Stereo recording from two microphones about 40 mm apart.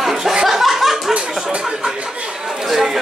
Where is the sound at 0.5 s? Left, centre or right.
Centre.